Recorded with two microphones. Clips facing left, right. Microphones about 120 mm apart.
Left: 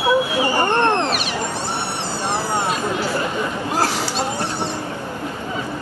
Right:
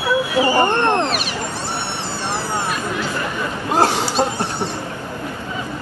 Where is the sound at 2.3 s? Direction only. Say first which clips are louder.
Left 2 dB; 20° left (ahead or behind).